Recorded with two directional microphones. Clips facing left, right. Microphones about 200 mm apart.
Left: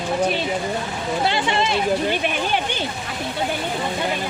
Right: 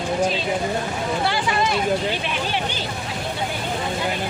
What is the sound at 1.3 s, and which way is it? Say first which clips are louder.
Speech: left 2 dB; 25° left (ahead or behind).